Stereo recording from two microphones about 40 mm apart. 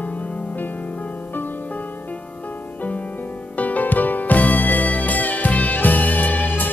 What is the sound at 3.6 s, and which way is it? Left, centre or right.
Music, left.